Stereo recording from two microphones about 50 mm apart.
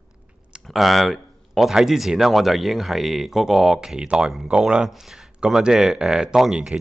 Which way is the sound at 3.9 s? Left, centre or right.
Centre.